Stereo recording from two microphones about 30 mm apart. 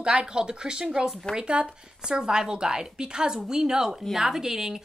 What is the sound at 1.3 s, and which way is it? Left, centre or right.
Speech, right.